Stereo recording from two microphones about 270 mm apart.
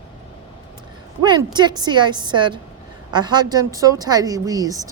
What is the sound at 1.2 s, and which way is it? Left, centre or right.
A woman's voice, centre.